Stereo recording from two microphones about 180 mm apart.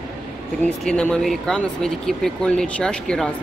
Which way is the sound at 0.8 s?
5° left (ahead or behind).